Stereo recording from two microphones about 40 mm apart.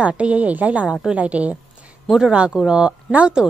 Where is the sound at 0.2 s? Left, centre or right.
Right.